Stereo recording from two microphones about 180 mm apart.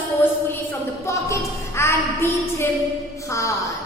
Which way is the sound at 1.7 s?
15° left (ahead or behind).